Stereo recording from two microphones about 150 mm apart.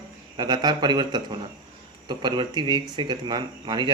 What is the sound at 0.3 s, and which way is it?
Speech, 30° right (ahead or behind).